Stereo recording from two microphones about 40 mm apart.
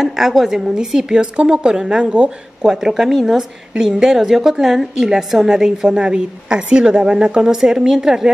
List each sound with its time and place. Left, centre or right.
0.0 s a woman's voice: centre; by 2.3 s right
2.6 s a woman's voice: centre